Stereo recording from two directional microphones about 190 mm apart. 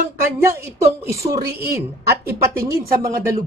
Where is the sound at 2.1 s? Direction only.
15° right (ahead or behind).